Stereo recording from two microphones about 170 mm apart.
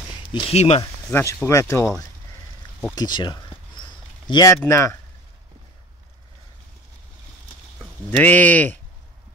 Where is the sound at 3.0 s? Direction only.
25° left (ahead or behind).